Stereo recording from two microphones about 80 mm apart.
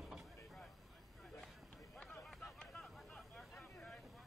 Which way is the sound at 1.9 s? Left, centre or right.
Centre.